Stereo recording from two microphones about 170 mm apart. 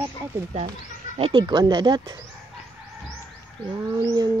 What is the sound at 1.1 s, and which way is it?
Bird, 30° right (ahead or behind).